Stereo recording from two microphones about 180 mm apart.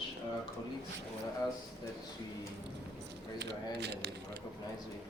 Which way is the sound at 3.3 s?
70° right (ahead or behind).